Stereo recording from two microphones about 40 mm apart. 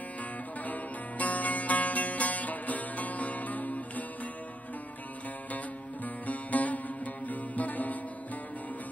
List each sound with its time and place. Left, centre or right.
0.7 s music: left
6.2 s music: left